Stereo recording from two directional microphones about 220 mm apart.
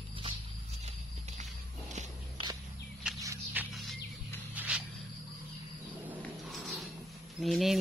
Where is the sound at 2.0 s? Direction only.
20° right (ahead or behind).